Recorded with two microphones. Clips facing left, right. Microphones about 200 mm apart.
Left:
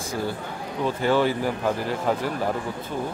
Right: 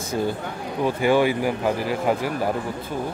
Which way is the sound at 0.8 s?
15° right (ahead or behind).